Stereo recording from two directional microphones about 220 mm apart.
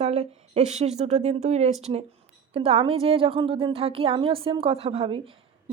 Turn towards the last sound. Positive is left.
turn(degrees=-25)  # may be behind; listen again after turning